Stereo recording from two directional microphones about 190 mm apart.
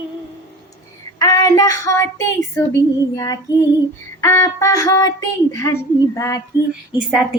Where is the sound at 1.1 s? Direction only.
20° left (ahead or behind).